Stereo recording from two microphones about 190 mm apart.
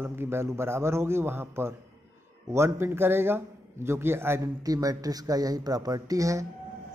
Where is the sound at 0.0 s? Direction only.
10° right (ahead or behind).